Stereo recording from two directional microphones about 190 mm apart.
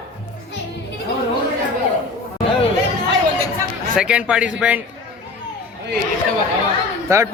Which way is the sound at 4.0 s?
5° right (ahead or behind).